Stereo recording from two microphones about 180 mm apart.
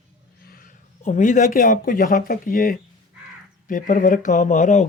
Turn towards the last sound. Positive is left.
turn(degrees=45)  # may be behind; listen again after turning